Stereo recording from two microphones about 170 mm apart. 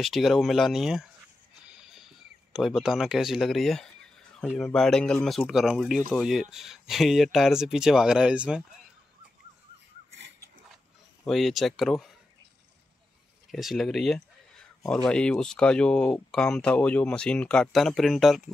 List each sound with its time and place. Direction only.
0.0 s speech: centre (ahead or behind)
1.7 s a sound: 5° right (ahead or behind)
4.5 s speech: centre (ahead or behind)
11.2 s speech: centre (ahead or behind)
13.5 s speech: centre (ahead or behind)